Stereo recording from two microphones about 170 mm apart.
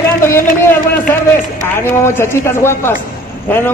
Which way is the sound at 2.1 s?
15° left (ahead or behind).